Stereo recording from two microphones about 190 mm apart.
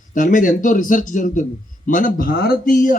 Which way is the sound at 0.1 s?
45° left (ahead or behind).